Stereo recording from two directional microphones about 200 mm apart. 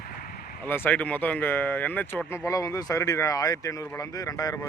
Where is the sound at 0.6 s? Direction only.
10° left (ahead or behind).